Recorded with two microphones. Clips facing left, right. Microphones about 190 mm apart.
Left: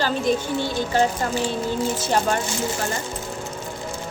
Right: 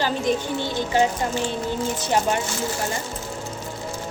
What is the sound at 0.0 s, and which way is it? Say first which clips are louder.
Speech: left 1 dB; 15° right (ahead or behind).